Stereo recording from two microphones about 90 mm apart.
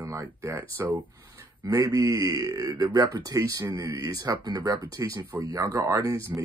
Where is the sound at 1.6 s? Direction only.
35° right (ahead or behind).